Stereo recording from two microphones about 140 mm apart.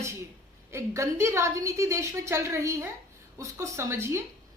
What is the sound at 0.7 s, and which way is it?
A woman's voice, 20° right (ahead or behind).